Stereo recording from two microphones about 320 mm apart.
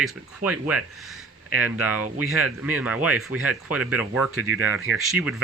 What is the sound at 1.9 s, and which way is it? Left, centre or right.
Speech, right.